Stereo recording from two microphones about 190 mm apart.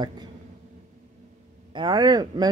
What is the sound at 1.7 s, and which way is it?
Speech, 25° right (ahead or behind).